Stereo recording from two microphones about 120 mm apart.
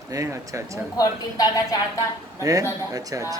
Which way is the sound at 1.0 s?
30° left (ahead or behind).